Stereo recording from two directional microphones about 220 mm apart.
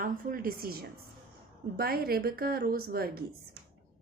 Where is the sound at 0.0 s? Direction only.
40° right (ahead or behind).